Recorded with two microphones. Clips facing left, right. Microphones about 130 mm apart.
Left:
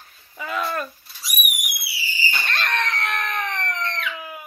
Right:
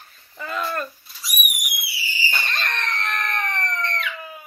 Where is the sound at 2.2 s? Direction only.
Centre (ahead or behind).